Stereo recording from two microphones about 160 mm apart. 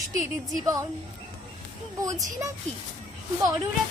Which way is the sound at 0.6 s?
20° right (ahead or behind).